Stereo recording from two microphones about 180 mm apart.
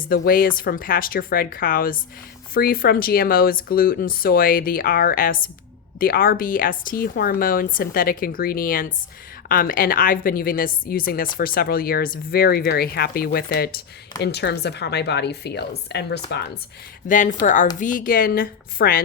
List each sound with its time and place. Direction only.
0.1 s a woman's voice: 55° left (ahead or behind)
17.1 s speech: 45° left (ahead or behind)